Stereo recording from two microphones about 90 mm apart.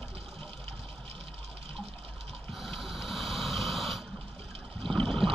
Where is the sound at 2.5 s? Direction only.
Centre (ahead or behind).